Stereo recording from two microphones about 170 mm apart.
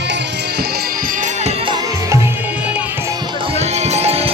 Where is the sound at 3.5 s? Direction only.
40° right (ahead or behind).